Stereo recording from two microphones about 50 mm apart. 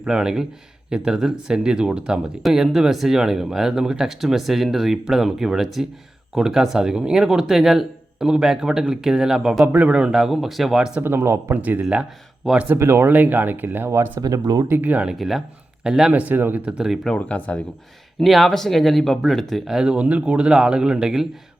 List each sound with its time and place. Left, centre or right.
0.0 s speech: centre
9.7 s a man's voice: right
10.0 s speech: centre
11.0 s speech: right
11.5 s speech: right
12.7 s speech: right
13.1 s speech: right
15.1 s speech: centre
16.1 s speech: right
16.6 s speech: centre
17.2 s speech: left
18.2 s speech: centre
19.6 s speech: centre